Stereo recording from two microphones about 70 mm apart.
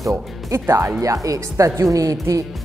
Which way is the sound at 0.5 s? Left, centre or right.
Right.